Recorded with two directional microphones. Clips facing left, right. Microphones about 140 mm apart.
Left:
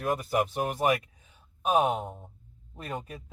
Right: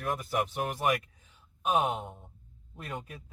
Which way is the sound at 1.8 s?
Centre (ahead or behind).